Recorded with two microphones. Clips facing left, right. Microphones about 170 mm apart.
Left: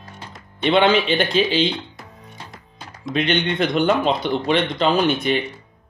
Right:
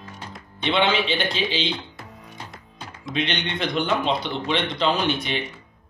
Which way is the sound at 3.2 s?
50° left (ahead or behind).